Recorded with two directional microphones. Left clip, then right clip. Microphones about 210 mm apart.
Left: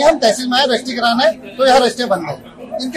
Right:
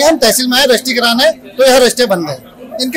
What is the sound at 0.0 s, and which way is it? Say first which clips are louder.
Speech: right 2 dB; 45° right (ahead or behind).